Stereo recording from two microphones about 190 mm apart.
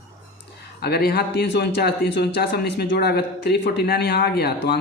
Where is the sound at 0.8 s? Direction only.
55° left (ahead or behind).